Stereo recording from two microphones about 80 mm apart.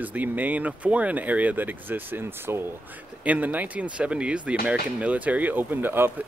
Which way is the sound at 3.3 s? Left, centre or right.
Centre.